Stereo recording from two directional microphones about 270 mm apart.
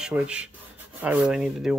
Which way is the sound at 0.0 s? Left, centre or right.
Centre.